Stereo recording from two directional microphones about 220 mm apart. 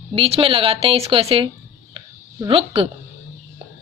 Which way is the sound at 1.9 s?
25° right (ahead or behind).